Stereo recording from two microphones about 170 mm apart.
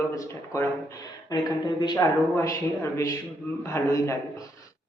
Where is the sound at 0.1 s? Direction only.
20° left (ahead or behind).